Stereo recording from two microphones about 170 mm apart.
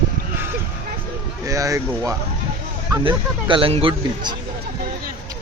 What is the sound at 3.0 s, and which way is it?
Speech, 30° right (ahead or behind).